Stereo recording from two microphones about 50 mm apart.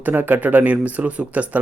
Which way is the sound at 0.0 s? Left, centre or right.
Right.